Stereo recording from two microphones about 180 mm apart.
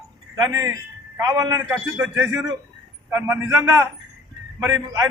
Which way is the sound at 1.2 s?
20° right (ahead or behind).